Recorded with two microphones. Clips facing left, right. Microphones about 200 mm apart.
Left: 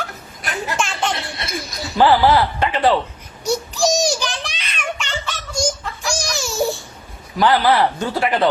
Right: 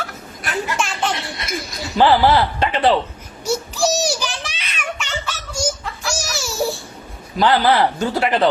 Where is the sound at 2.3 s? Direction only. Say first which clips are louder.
Even; 25° right (ahead or behind).